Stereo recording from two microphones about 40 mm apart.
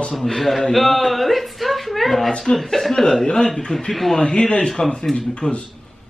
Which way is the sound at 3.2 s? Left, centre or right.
Left.